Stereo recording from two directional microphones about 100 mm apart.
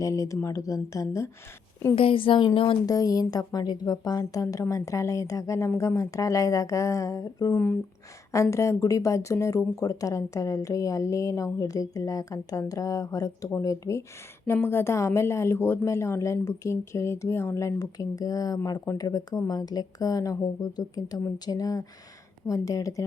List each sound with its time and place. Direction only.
0.0 s speech: 35° left (ahead or behind)
2.0 s a woman's voice: 65° left (ahead or behind)
2.8 s speech: 35° left (ahead or behind)
7.5 s speech: 20° left (ahead or behind)
8.3 s speech: 30° left (ahead or behind)